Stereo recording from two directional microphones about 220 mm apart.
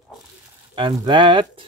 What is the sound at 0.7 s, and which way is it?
Speech, 20° right (ahead or behind).